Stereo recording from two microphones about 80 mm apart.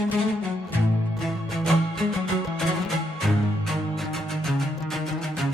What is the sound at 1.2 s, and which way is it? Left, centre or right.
Music, centre.